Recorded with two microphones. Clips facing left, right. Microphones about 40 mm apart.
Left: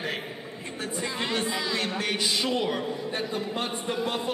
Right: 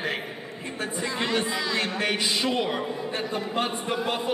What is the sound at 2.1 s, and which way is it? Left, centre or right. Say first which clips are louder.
Speech: right 1 dB; right.